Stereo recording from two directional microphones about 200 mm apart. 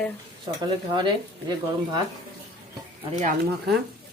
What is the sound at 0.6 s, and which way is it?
Speech, 20° right (ahead or behind).